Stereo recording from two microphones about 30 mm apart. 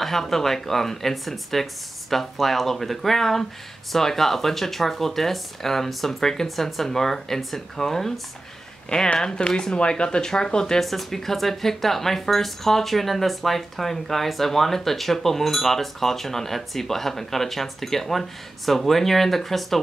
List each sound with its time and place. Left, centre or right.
0.0 s speech: centre
9.2 s speech: left
9.8 s speech: left
10.8 s speech: centre